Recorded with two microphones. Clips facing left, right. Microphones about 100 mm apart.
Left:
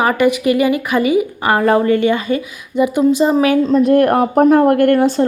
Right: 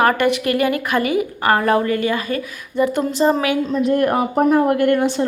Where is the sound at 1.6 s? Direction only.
25° left (ahead or behind).